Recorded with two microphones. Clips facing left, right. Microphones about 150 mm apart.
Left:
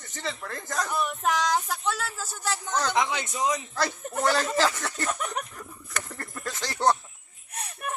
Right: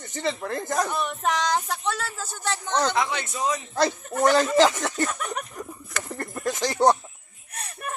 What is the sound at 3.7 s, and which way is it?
Speech, 20° right (ahead or behind).